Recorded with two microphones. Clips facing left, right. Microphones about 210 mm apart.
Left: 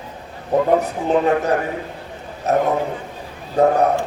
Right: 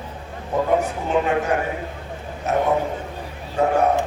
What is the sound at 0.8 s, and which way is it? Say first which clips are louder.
A man's voice: left 4 dB; 35° left (ahead or behind).